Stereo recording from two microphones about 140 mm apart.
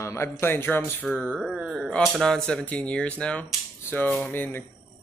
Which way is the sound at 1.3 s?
5° right (ahead or behind).